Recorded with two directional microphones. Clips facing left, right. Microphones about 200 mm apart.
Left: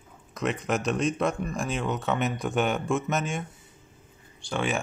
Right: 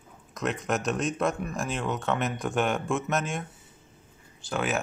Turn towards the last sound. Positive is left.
turn(degrees=0)  # may be behind; listen again after turning